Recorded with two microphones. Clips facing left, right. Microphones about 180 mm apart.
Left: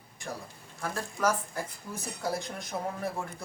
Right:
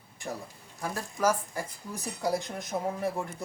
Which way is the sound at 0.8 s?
10° right (ahead or behind).